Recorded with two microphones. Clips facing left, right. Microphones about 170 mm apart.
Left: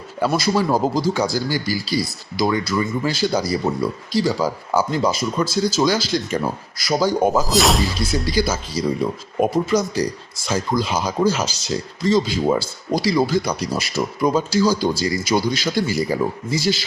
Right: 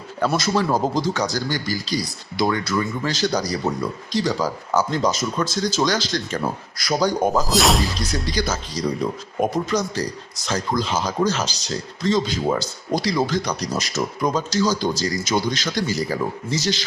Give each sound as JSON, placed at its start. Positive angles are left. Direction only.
{"t": 0.3, "sound": "speech", "side_deg": 10}